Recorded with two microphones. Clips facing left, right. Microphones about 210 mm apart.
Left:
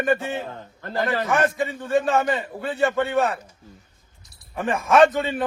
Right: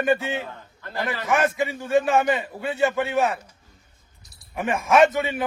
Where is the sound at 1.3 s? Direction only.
Centre (ahead or behind).